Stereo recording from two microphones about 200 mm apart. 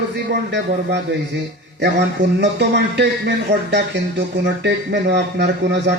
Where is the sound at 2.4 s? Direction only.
60° right (ahead or behind).